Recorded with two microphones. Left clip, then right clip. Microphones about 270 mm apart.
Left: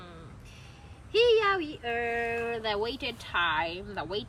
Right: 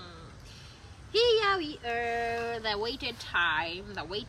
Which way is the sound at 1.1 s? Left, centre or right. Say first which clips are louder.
Left 2 dB; centre.